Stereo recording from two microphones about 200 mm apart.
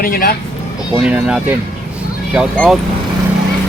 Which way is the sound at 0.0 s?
45° left (ahead or behind).